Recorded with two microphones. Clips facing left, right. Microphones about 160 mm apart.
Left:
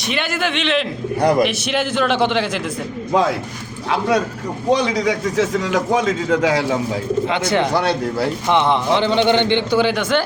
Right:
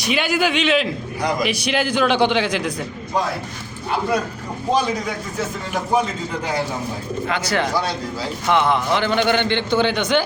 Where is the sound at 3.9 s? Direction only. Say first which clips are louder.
Left 3 dB; 85° left.